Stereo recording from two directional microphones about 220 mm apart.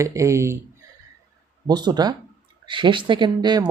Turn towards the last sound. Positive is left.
turn(degrees=-20)  # may be behind; listen again after turning